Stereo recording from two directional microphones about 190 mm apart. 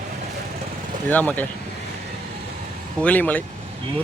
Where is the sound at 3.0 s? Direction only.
10° left (ahead or behind).